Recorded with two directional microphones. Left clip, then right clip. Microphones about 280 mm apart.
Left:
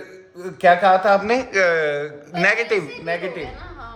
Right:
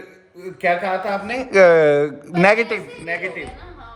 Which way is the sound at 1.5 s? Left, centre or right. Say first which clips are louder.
Right 10 dB; centre.